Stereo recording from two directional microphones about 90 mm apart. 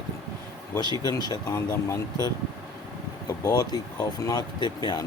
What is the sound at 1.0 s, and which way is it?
Speech, 50° left (ahead or behind).